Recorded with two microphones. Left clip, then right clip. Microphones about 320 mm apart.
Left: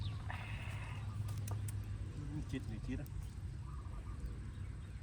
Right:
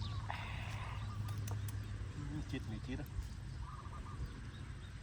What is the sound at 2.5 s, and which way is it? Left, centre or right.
Speech, centre.